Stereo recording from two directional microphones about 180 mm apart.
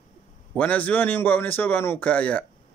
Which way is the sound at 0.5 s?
10° left (ahead or behind).